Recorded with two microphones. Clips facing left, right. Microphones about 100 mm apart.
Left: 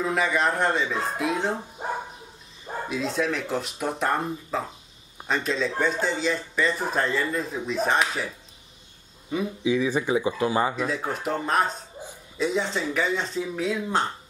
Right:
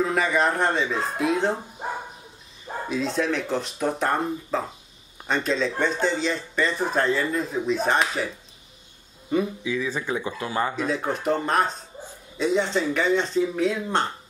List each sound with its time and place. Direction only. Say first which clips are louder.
0.0 s speech: right 2 dB; centre (ahead or behind)
2.9 s speech: right 2 dB; centre (ahead or behind)
9.6 s speech: left 4 dB; 20° left (ahead or behind)
10.8 s speech: right 2 dB; centre (ahead or behind)